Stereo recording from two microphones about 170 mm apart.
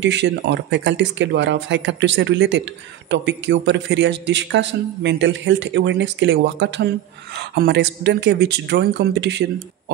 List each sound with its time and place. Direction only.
0.0 s a man's voice: 90° right
7.3 s a man's voice: 80° right